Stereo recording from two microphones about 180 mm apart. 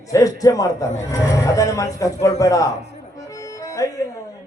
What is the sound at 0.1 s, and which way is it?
A man's voice, 20° left (ahead or behind).